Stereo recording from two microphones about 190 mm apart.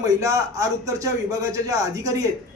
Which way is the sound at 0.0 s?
15° right (ahead or behind).